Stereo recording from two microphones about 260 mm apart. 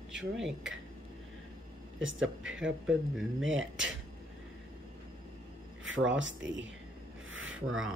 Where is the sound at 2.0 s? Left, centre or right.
Right.